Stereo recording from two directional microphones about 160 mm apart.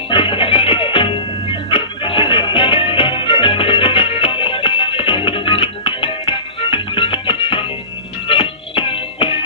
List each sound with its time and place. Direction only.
0.1 s music: 30° left (ahead or behind)